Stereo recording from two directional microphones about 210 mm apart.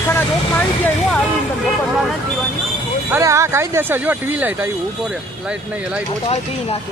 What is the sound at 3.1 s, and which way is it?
Speech, 10° right (ahead or behind).